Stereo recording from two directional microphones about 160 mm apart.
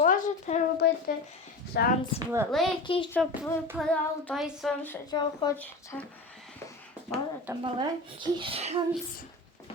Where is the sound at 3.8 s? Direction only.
5° left (ahead or behind).